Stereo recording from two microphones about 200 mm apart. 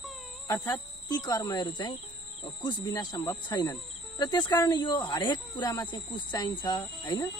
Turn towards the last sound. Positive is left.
turn(degrees=20)  # may be behind; listen again after turning